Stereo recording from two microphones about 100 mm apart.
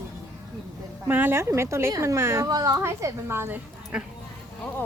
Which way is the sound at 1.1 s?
20° right (ahead or behind).